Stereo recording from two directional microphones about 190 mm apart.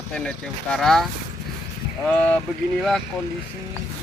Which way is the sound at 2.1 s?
5° left (ahead or behind).